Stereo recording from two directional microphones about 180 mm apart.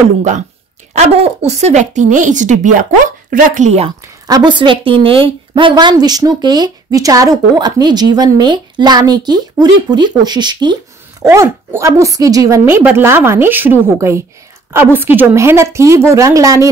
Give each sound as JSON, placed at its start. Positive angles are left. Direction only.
{"t": 0.9, "sound": "speech", "side_deg": -35}
{"t": 4.0, "sound": "a woman's voice", "side_deg": -20}